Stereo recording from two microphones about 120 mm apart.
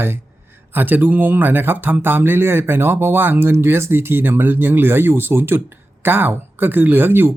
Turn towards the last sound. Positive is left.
turn(degrees=-20)  # may be behind; listen again after turning